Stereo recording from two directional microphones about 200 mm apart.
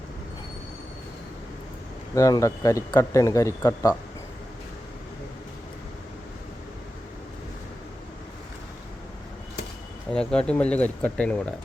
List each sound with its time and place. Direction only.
2.1 s speech: 15° left (ahead or behind)
10.1 s speech: 5° left (ahead or behind)